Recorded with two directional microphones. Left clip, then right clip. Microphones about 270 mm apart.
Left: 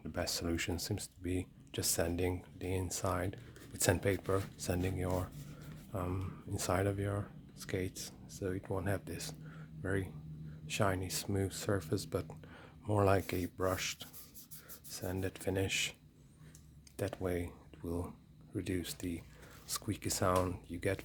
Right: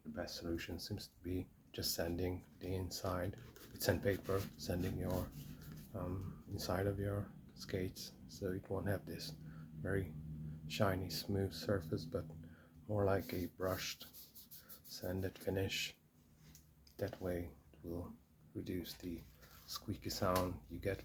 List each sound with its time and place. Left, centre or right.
0.1 s speech: left
17.0 s speech: left